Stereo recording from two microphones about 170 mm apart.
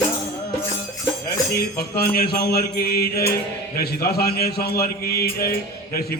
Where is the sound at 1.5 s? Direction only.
65° left (ahead or behind).